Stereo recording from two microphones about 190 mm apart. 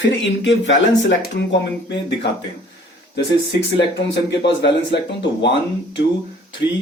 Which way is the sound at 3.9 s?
65° left (ahead or behind).